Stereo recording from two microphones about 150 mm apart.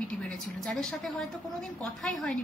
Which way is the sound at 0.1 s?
5° left (ahead or behind).